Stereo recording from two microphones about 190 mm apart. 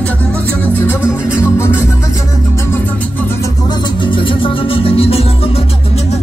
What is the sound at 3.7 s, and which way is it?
Music, 25° left (ahead or behind).